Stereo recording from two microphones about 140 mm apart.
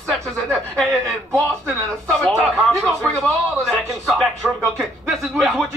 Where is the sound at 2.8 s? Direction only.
Centre (ahead or behind).